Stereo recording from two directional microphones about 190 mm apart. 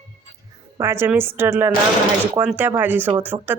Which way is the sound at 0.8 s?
15° right (ahead or behind).